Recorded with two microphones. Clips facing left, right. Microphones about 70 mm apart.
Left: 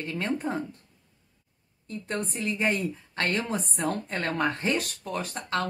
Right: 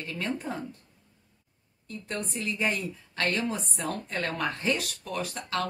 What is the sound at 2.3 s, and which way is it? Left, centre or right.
A woman's voice, left.